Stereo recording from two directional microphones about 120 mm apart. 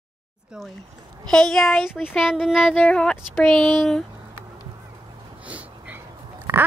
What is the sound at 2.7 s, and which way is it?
Female singing, 10° left (ahead or behind).